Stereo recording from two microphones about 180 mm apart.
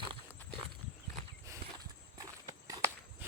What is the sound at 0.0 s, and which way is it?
Horse, 30° right (ahead or behind).